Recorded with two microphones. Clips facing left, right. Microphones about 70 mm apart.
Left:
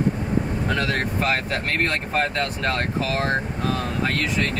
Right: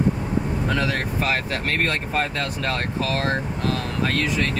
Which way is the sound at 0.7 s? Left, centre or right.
Centre.